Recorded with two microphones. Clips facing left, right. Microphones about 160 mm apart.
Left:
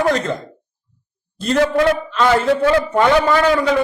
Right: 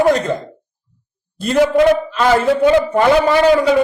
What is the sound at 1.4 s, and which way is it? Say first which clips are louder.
A man's voice: right 3 dB; 10° right (ahead or behind).